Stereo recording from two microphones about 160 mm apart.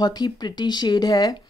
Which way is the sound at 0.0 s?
25° left (ahead or behind).